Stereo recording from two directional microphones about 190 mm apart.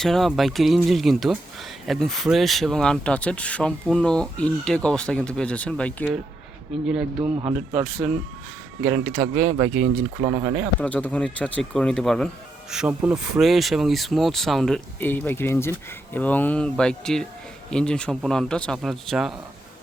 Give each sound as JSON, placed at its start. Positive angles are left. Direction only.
{"t": 0.0, "sound": "speech", "side_deg": 0}
{"t": 7.2, "sound": "speech", "side_deg": -30}
{"t": 7.8, "sound": "speech", "side_deg": 0}
{"t": 10.0, "sound": "speech", "side_deg": -25}
{"t": 10.8, "sound": "speech", "side_deg": 5}
{"t": 12.7, "sound": "speech", "side_deg": -5}